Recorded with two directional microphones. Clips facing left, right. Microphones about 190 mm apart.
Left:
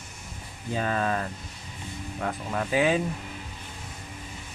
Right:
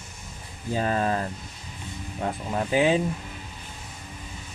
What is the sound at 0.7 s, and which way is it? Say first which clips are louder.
Speech: right 2 dB; 30° right (ahead or behind).